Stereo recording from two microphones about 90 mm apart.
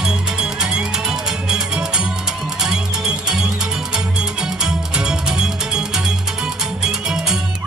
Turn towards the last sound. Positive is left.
turn(degrees=-10)  # may be behind; listen again after turning